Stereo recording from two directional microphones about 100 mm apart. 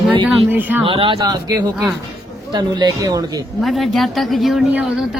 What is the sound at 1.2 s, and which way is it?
Speech, 40° right (ahead or behind).